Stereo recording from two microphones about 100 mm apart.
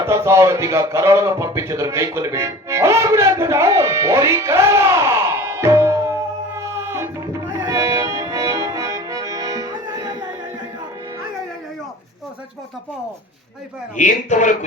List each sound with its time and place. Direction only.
0.0 s a man's voice: 30° right (ahead or behind)
7.6 s music: 35° right (ahead or behind)
9.7 s music: 45° right (ahead or behind)